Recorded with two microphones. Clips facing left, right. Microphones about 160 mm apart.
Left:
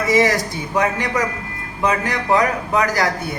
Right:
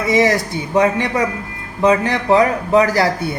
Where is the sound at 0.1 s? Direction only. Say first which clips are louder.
Right 2 dB; 20° right (ahead or behind).